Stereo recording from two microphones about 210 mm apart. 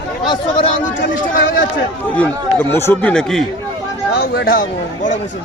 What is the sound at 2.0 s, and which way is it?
Speech, 5° left (ahead or behind).